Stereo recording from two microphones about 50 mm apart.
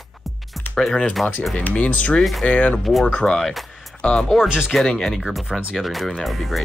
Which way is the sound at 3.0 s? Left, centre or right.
Left.